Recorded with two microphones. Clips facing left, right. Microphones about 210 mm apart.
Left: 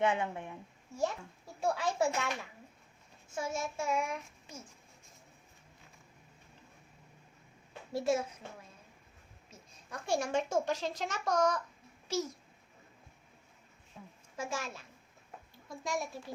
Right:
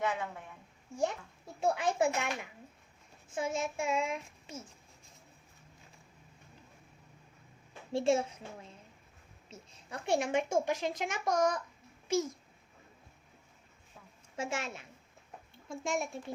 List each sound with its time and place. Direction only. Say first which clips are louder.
0.0 s a woman's voice: left 4 dB; 25° left (ahead or behind)
1.6 s child singing: right 2 dB; 20° right (ahead or behind)
7.9 s child singing: right 3 dB; 25° right (ahead or behind)
9.5 s a woman's voice: right 2 dB; 25° right (ahead or behind)
14.3 s child singing: right 2 dB; 25° right (ahead or behind)
15.5 s a child's voice: right 2 dB; 25° right (ahead or behind)